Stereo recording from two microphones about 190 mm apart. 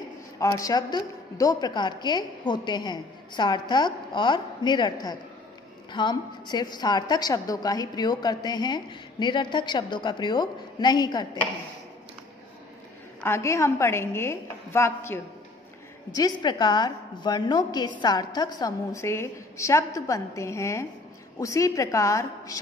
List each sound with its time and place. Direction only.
0.4 s a woman's voice: 15° left (ahead or behind)
13.2 s a woman's voice: 15° left (ahead or behind)